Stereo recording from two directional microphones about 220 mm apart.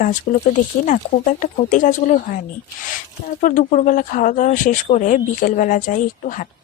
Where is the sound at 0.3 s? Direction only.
35° left (ahead or behind).